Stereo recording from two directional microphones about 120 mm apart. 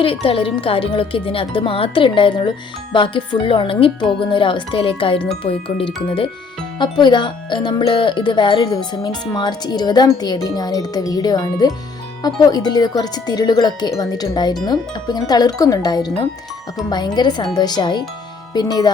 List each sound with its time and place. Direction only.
0.0 s speech: 50° left (ahead or behind)
6.7 s speech: 40° left (ahead or behind)